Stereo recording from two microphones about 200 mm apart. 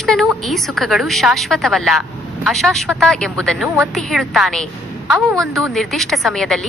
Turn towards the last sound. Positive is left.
turn(degrees=0)  # may be behind; listen again after turning